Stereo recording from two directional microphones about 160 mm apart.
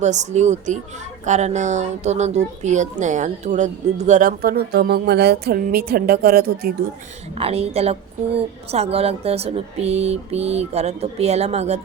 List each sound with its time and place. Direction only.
0.0 s speech: 45° right (ahead or behind); by 5.5 s 85° right
5.7 s a woman's voice: 70° right (ahead or behind)
7.3 s speech: 40° right (ahead or behind)